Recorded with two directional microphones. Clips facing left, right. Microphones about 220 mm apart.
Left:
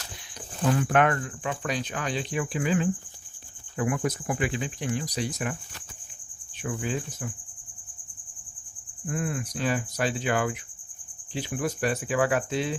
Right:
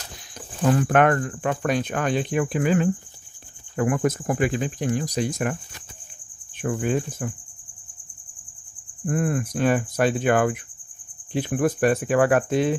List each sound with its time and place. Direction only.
0.7 s speech: 50° right (ahead or behind)
6.6 s speech: 50° right (ahead or behind)
9.0 s speech: 50° right (ahead or behind)